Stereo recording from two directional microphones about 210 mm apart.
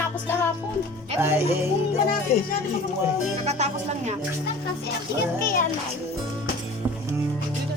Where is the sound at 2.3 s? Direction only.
30° left (ahead or behind).